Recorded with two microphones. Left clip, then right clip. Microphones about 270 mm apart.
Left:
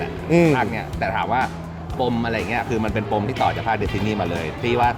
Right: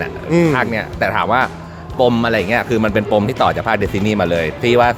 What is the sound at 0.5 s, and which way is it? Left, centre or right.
Speech, right.